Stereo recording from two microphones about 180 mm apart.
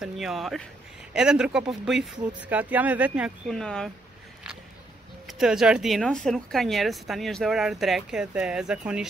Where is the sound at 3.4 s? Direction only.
5° left (ahead or behind).